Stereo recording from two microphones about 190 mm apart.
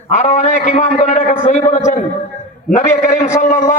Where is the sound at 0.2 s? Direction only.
40° left (ahead or behind).